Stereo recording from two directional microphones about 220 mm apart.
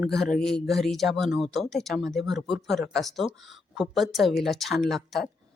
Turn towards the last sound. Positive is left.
turn(degrees=0)  # may be behind; listen again after turning